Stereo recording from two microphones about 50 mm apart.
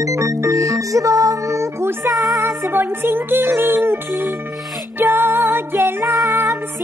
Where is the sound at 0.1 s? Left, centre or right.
Right.